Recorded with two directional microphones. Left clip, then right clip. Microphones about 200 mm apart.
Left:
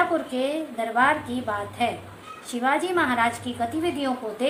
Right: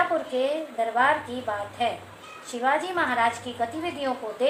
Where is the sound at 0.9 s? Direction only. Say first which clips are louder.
Left 2 dB; 15° left (ahead or behind).